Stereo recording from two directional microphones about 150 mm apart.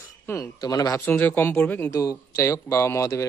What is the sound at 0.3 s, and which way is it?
Speech, 20° left (ahead or behind).